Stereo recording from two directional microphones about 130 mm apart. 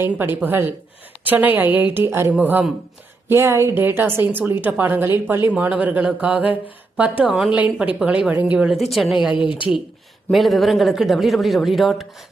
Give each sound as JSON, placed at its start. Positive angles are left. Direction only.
{"t": 0.0, "sound": "a woman's voice", "side_deg": -15}
{"t": 9.3, "sound": "a woman's voice", "side_deg": 40}
{"t": 10.3, "sound": "speech", "side_deg": 0}